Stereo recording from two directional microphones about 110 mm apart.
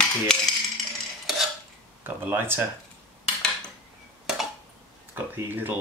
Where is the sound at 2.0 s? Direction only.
20° right (ahead or behind).